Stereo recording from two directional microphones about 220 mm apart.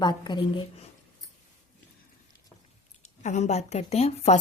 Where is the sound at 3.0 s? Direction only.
35° left (ahead or behind).